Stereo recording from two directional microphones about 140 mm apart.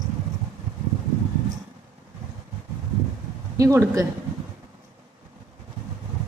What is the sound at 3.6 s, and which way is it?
Speech, 25° right (ahead or behind).